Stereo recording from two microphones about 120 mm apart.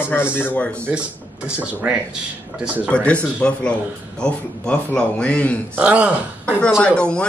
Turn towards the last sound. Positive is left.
turn(degrees=10)  # may be behind; listen again after turning